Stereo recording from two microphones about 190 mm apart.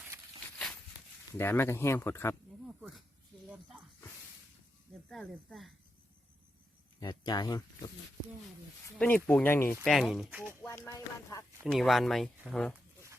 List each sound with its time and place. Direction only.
1.4 s speech: 10° left (ahead or behind)
2.6 s snake: 5° right (ahead or behind)
3.5 s speech: 5° right (ahead or behind)
5.0 s speech: 5° left (ahead or behind)
7.0 s speech: 20° left (ahead or behind)
9.0 s speech: 10° left (ahead or behind)
9.8 s speech: centre (ahead or behind)
10.6 s speech: 15° left (ahead or behind)
11.6 s speech: centre (ahead or behind)